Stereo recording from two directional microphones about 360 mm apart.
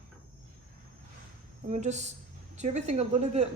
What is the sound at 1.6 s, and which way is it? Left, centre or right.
A woman's voice, centre.